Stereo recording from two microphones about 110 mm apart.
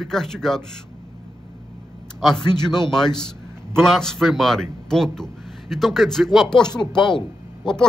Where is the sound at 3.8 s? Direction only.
5° left (ahead or behind).